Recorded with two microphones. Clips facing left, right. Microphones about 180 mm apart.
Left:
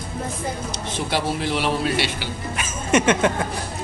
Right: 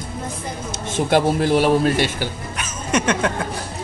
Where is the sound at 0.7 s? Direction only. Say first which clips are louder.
Right 10 dB; 50° right (ahead or behind).